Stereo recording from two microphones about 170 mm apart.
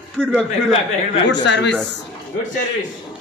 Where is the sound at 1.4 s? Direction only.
90° left.